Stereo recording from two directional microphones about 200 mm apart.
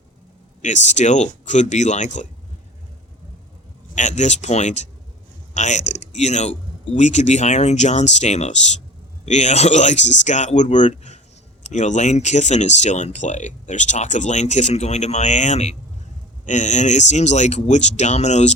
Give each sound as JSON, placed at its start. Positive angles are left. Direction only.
{"t": 0.6, "sound": "speech", "side_deg": 35}
{"t": 3.9, "sound": "speech", "side_deg": 35}